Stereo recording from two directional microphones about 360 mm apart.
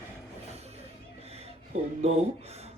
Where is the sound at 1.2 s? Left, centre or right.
Centre.